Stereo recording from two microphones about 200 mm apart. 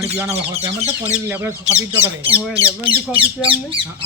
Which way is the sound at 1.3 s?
10° right (ahead or behind).